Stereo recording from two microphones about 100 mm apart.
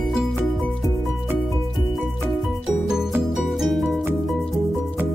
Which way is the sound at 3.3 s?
Centre (ahead or behind).